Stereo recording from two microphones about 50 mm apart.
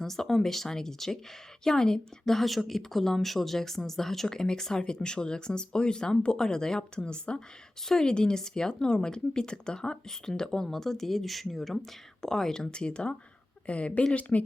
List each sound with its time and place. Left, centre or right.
0.0 s a woman's voice: centre; by 14.4 s left